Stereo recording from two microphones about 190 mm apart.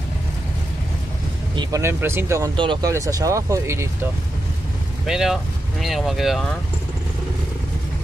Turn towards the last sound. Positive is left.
turn(degrees=0)  # may be behind; listen again after turning